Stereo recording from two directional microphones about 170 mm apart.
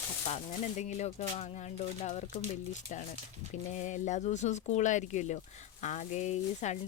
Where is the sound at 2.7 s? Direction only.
45° left (ahead or behind).